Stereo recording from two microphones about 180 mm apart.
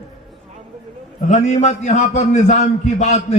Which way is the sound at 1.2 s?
40° left (ahead or behind).